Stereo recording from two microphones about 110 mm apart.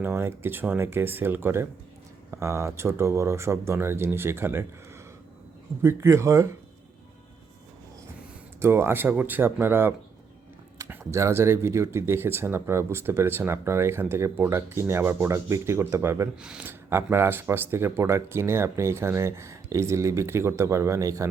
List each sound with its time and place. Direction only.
0.0 s speech: 20° right (ahead or behind)
5.8 s speech: 25° right (ahead or behind)
8.6 s speech: 20° right (ahead or behind)
16.4 s speech: 5° right (ahead or behind)
16.6 s speech: 25° right (ahead or behind)